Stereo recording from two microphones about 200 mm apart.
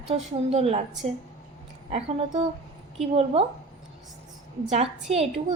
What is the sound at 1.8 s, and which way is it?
A woman's voice, 30° right (ahead or behind).